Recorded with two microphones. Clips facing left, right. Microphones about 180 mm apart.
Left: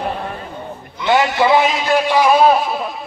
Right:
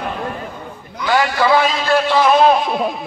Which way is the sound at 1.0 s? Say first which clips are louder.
Left 1 dB; 25° left (ahead or behind).